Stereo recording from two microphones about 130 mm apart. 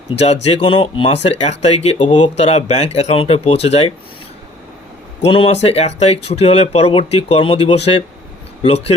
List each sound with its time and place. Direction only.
0.2 s speech: 55° left (ahead or behind)
0.6 s speech: 40° left (ahead or behind)
1.1 s speech: 55° left (ahead or behind)
5.2 s speech: 45° left (ahead or behind)